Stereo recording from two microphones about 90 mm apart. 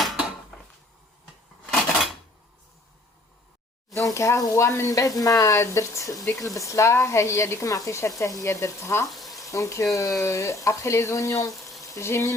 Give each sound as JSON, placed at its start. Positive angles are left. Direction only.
{"t": 3.9, "sound": "sizzle", "side_deg": 35}
{"t": 4.9, "sound": "speech", "side_deg": 40}
{"t": 9.0, "sound": "frying", "side_deg": 0}
{"t": 9.4, "sound": "speech", "side_deg": 35}